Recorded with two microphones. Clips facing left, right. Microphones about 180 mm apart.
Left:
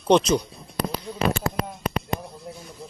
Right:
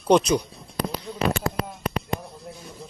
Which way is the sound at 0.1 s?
15° right (ahead or behind).